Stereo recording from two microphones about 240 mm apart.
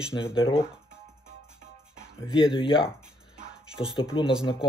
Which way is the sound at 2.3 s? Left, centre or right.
Left.